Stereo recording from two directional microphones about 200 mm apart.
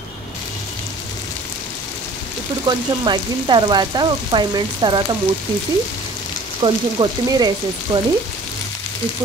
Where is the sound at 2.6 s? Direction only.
20° right (ahead or behind).